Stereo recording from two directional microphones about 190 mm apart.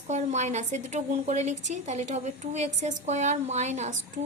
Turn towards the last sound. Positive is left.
turn(degrees=-40)  # may be behind; listen again after turning